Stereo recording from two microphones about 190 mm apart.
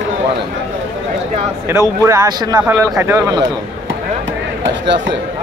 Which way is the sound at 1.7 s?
15° right (ahead or behind).